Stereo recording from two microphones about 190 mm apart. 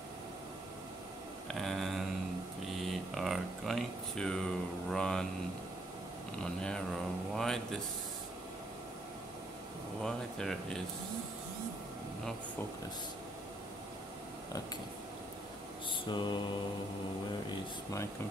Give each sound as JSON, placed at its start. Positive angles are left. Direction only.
{"t": 1.5, "sound": "a sound", "side_deg": 0}
{"t": 6.4, "sound": "speech", "side_deg": 5}
{"t": 10.0, "sound": "speech", "side_deg": 5}
{"t": 16.1, "sound": "mantra", "side_deg": 25}